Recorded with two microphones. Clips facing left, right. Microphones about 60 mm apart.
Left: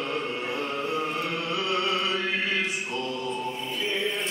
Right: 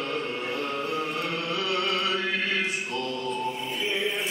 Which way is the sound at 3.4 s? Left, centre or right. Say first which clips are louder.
Right 1 dB; centre.